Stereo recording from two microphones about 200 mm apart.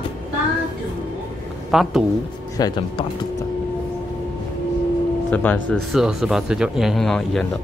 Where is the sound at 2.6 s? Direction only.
20° left (ahead or behind).